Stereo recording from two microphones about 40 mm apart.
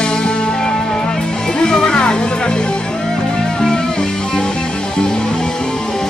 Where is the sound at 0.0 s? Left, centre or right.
Left.